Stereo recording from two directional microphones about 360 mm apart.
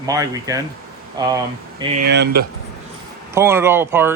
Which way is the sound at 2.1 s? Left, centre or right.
Right.